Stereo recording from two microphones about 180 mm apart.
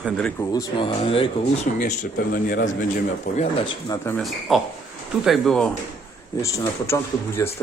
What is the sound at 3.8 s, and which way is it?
Speech, 15° left (ahead or behind).